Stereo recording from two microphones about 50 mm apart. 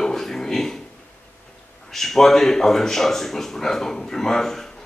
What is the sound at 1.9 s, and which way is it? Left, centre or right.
Speech, centre.